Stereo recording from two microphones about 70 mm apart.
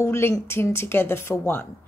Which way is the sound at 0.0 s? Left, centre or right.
Left.